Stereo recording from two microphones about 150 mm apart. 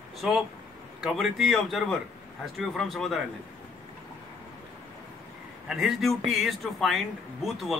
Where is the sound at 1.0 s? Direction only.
Centre (ahead or behind).